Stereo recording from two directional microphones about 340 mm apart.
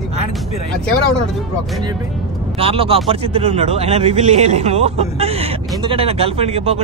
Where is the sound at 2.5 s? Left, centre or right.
Centre.